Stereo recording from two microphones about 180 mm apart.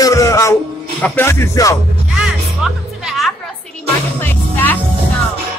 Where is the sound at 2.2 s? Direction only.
Centre (ahead or behind).